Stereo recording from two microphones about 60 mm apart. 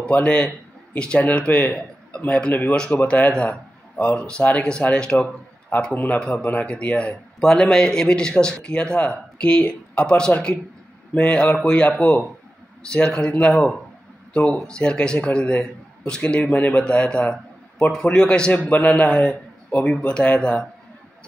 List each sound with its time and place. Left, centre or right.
0.1 s a man's voice: left
5.9 s a man's voice: left
12.0 s speech: centre
12.9 s a man's voice: centre
18.5 s a man's voice: left